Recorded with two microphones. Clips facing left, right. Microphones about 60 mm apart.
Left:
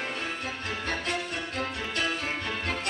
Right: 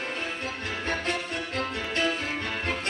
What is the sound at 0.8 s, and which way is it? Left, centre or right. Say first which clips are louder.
Music: right 2 dB; right.